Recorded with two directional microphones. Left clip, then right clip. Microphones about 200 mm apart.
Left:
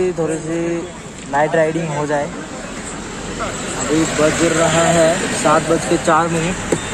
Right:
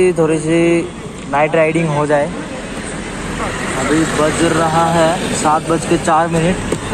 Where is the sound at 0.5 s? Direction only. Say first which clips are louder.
Right 8 dB; 10° right (ahead or behind).